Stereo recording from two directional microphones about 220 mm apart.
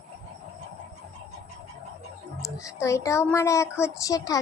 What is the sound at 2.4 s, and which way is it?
A woman's voice, 15° left (ahead or behind).